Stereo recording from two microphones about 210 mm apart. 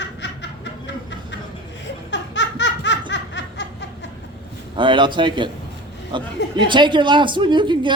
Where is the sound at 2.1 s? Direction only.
60° left (ahead or behind).